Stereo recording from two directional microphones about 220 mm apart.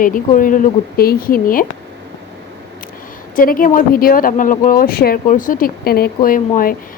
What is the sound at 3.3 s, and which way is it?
Speech, 40° left (ahead or behind).